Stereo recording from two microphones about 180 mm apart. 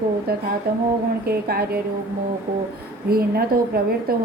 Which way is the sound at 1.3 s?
60° right (ahead or behind).